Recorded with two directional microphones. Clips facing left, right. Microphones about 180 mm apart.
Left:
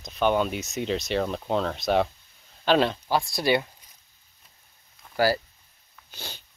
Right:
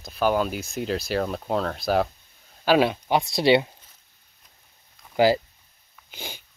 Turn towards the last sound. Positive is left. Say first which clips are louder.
# right 3 dB
turn(degrees=-15)  # may be behind; listen again after turning